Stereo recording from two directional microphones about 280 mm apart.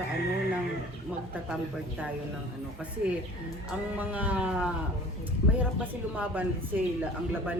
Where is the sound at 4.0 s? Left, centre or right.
Centre.